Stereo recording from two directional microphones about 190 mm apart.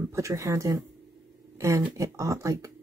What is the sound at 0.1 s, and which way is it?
Speech, 15° right (ahead or behind).